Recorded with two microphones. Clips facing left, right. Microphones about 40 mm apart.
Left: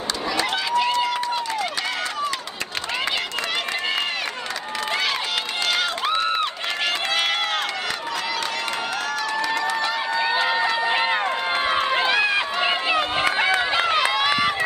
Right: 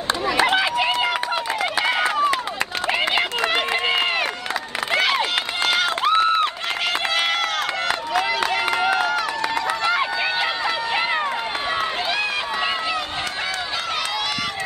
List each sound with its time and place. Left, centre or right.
0.4 s run: right
5.7 s run: centre
8.1 s a sound: centre
9.5 s run: centre
10.6 s run: centre
11.7 s run: centre
12.9 s run: left